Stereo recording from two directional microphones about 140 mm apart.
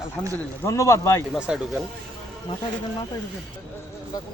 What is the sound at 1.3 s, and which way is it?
Speech, 5° right (ahead or behind).